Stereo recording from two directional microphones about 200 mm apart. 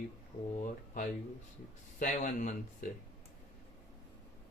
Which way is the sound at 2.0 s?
40° left (ahead or behind).